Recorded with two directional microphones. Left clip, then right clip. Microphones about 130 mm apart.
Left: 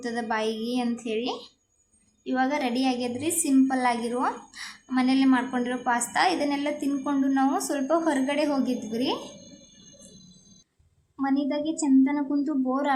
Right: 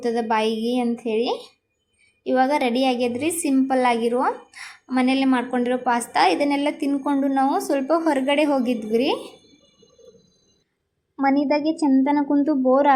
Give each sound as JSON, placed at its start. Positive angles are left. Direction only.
{"t": 0.0, "sound": "a woman's voice", "side_deg": -25}
{"t": 11.2, "sound": "speech", "side_deg": -35}